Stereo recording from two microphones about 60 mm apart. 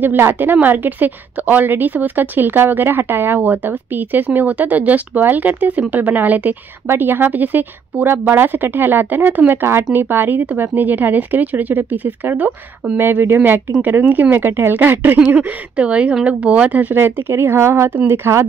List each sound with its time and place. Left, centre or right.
0.0 s a woman's voice: right
15.2 s speech: right
16.9 s a woman's voice: right